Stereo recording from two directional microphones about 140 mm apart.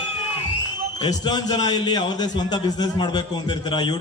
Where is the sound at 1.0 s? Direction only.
30° left (ahead or behind).